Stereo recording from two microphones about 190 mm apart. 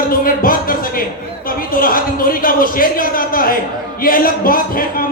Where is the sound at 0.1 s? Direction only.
45° left (ahead or behind).